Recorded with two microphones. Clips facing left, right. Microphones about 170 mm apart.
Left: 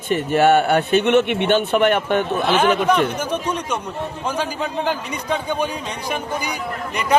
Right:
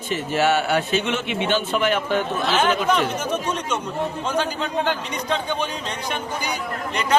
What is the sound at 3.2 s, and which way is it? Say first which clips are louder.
A man's voice: left 1 dB; 10° left (ahead or behind).